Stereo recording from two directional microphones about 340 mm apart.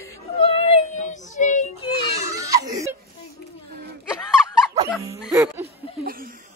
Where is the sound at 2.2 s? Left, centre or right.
Centre.